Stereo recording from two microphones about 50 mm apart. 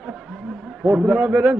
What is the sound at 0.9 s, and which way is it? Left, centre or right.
Speech, right.